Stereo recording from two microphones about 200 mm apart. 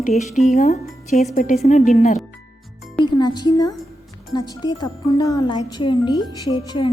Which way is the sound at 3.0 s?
20° left (ahead or behind).